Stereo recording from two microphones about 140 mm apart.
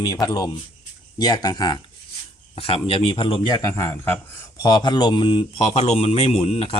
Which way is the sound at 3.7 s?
20° left (ahead or behind).